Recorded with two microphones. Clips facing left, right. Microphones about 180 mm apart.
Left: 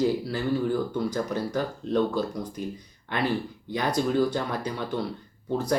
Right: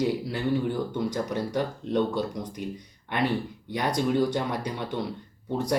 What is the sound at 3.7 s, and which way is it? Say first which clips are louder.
Speech: even; 20° right (ahead or behind).